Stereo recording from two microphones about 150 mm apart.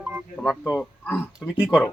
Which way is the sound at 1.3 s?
5° right (ahead or behind).